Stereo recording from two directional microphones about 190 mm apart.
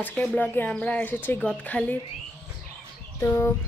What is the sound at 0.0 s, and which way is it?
Speech, 5° left (ahead or behind).